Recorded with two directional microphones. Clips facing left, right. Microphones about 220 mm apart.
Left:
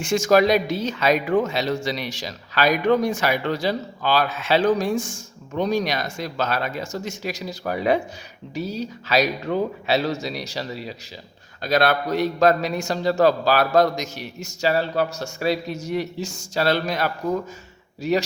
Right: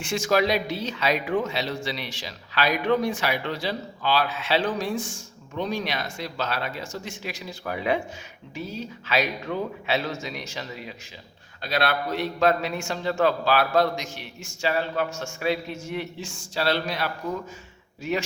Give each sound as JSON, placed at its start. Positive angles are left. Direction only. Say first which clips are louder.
{"t": 0.0, "sound": "a man's voice", "louder": "left 6 dB", "side_deg": 45}